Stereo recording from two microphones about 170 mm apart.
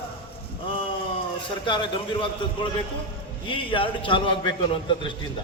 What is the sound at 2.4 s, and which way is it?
A man's voice, 30° left (ahead or behind).